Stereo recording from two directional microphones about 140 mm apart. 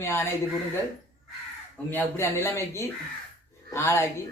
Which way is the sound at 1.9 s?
15° left (ahead or behind).